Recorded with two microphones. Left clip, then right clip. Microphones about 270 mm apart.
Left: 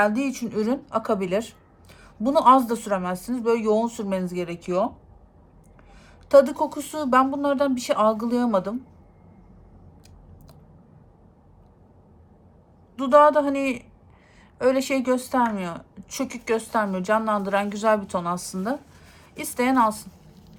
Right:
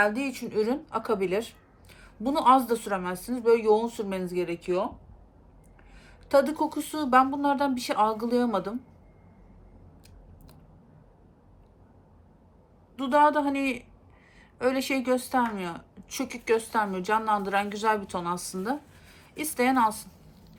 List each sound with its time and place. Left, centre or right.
0.0 s a woman's voice: centre
6.0 s a woman's voice: centre
13.0 s a woman's voice: centre